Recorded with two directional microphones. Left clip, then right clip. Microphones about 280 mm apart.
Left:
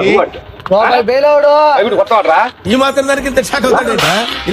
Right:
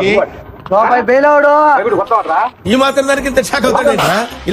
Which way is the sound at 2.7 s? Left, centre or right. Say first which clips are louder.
Right 2 dB; centre.